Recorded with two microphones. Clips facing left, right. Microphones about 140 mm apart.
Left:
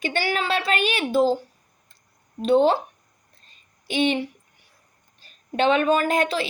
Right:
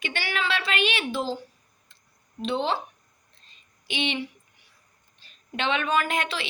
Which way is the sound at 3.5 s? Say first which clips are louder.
Left 5 dB; 45° left (ahead or behind).